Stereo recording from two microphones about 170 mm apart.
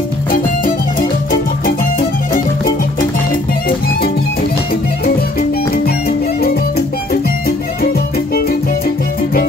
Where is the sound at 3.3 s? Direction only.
60° left (ahead or behind).